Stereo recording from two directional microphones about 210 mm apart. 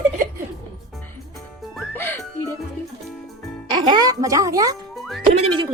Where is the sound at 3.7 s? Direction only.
20° right (ahead or behind).